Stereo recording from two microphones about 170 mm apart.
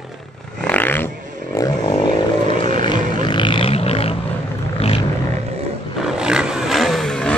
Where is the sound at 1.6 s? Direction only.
25° left (ahead or behind).